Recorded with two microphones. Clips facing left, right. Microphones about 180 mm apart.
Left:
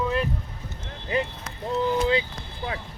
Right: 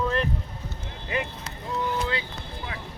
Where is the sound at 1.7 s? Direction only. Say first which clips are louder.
Left 6 dB; 20° left (ahead or behind).